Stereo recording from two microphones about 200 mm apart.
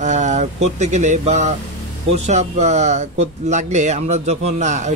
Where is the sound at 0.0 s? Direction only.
35° right (ahead or behind).